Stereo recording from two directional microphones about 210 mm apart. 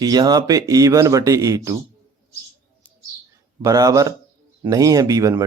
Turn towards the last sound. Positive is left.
turn(degrees=-15)  # may be behind; listen again after turning